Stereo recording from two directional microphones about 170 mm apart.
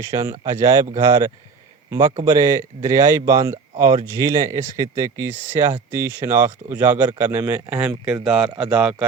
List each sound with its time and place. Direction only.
0.0 s a man's voice: 20° right (ahead or behind)